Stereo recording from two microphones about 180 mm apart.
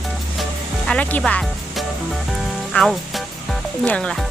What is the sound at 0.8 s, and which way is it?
Music, 5° left (ahead or behind).